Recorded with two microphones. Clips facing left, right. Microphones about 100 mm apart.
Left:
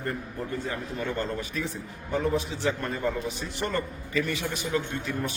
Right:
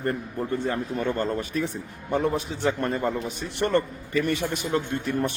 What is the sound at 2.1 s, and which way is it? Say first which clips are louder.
A man's voice: right 2 dB; 50° right (ahead or behind).